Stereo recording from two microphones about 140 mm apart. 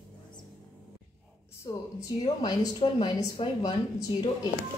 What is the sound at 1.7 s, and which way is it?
A woman's voice, 30° left (ahead or behind).